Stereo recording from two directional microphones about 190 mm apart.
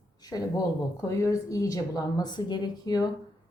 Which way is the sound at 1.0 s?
15° left (ahead or behind).